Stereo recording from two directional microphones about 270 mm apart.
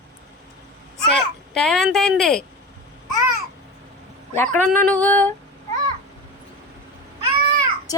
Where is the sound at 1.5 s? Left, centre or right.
Centre.